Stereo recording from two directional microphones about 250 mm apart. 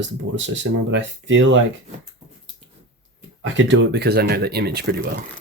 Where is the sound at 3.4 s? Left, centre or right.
Right.